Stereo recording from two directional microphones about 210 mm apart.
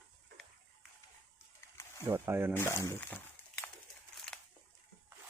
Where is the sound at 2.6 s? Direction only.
10° left (ahead or behind).